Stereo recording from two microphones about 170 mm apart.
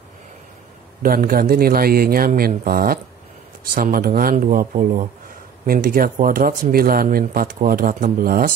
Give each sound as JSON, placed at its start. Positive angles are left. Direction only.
{"t": 1.0, "sound": "speech", "side_deg": -55}